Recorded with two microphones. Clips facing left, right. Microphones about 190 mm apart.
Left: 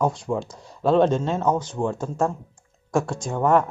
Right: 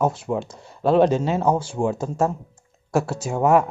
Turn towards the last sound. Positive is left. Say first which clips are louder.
# right 2 dB
turn(degrees=-10)  # may be behind; listen again after turning